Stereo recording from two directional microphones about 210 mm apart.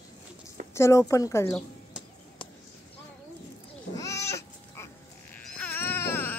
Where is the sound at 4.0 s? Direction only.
15° left (ahead or behind).